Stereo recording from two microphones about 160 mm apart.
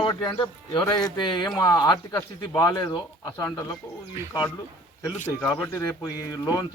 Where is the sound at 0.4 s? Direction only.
30° left (ahead or behind).